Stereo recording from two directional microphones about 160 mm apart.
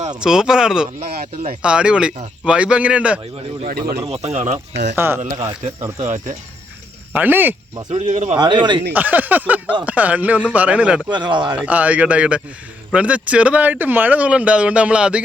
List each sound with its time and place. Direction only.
0.2 s speech: 5° right (ahead or behind)
0.9 s speech: 40° right (ahead or behind)
1.6 s speech: 5° right (ahead or behind)
3.7 s speech: 70° right (ahead or behind)
4.1 s speech: 40° right (ahead or behind)
4.7 s speech: 90° right
4.9 s speech: 15° right (ahead or behind)
5.2 s speech: 45° right (ahead or behind)
7.1 s speech: 10° right (ahead or behind)
7.9 s speech: 50° right (ahead or behind)
8.4 s speech: 30° right (ahead or behind)
8.9 s speech: 10° right (ahead or behind)
11.1 s speech: 30° right (ahead or behind)
11.5 s speech: 10° right (ahead or behind)